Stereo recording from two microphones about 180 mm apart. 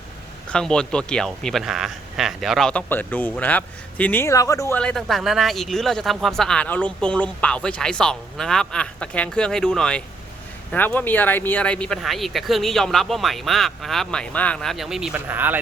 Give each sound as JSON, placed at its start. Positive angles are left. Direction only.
{"t": 0.5, "sound": "speech", "side_deg": 5}
{"t": 4.8, "sound": "speech", "side_deg": 5}